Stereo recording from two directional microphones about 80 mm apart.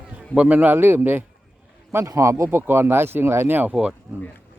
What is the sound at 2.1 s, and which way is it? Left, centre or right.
Speech, right.